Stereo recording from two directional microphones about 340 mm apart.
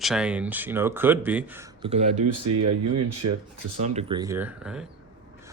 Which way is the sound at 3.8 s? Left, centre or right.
Centre.